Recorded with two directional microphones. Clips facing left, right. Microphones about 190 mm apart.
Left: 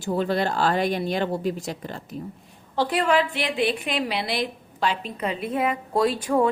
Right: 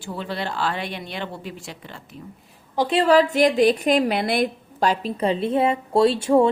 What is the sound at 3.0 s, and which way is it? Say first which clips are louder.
A woman's voice: right 6 dB; 40° right (ahead or behind).